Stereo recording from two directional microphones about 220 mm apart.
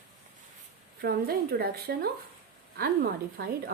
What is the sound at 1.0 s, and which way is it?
Speech, 45° right (ahead or behind).